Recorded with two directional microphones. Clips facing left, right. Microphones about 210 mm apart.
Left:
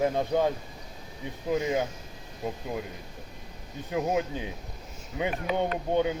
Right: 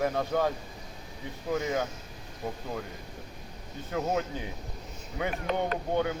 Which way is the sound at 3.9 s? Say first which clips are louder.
Left 2 dB; 15° left (ahead or behind).